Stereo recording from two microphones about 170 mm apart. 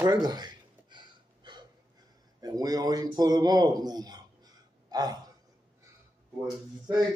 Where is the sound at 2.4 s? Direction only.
20° right (ahead or behind).